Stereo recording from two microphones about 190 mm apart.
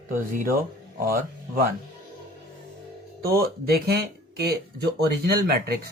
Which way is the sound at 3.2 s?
50° right (ahead or behind).